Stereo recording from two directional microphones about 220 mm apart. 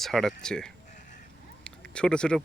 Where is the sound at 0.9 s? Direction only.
35° left (ahead or behind).